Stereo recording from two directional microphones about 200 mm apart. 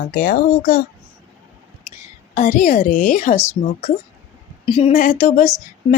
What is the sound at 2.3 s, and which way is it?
A woman's voice, 40° left (ahead or behind).